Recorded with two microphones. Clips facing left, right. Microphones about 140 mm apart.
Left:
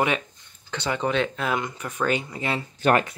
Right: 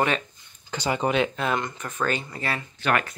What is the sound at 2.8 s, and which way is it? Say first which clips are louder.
Speech: left 4 dB; 40° left (ahead or behind).